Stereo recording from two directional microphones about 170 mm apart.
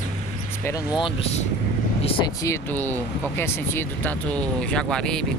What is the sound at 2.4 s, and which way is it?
Speech, 15° left (ahead or behind).